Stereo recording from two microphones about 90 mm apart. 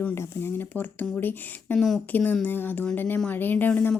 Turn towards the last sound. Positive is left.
turn(degrees=20)  # may be behind; listen again after turning